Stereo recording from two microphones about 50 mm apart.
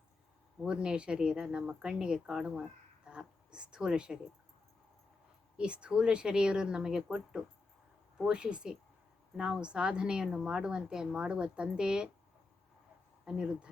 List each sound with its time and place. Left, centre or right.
0.6 s speech: centre
5.5 s speech: right
13.2 s speech: centre